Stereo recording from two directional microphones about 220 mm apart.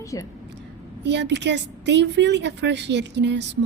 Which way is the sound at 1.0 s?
50° right (ahead or behind).